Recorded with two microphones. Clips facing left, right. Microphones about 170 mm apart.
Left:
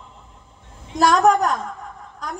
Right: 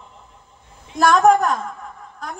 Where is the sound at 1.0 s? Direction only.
40° left (ahead or behind).